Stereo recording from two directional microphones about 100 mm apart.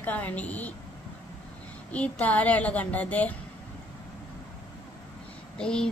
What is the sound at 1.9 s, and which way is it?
A woman's voice, 15° left (ahead or behind).